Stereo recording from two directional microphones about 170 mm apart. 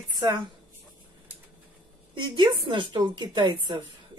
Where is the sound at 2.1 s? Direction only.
25° right (ahead or behind).